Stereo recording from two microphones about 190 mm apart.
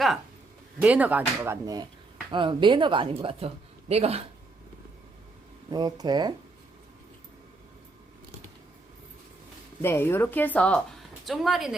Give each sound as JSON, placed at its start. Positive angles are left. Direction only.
{"t": 0.8, "sound": "speech", "side_deg": -5}
{"t": 5.7, "sound": "speech", "side_deg": -20}
{"t": 9.8, "sound": "a woman's voice", "side_deg": 10}